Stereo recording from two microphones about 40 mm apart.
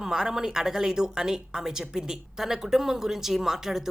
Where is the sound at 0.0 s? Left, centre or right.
Centre.